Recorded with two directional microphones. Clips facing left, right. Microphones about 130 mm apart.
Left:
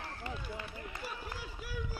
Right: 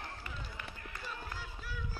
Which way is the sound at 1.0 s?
15° left (ahead or behind).